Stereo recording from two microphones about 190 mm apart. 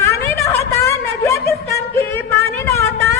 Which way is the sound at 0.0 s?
15° left (ahead or behind).